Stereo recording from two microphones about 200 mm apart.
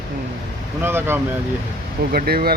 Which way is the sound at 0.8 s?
10° right (ahead or behind).